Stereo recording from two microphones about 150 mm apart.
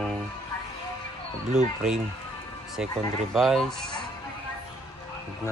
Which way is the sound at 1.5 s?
5° right (ahead or behind).